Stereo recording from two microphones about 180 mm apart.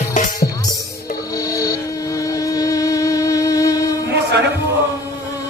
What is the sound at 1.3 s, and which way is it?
Music, 20° left (ahead or behind).